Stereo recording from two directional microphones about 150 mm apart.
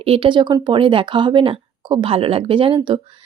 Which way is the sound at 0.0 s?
40° right (ahead or behind).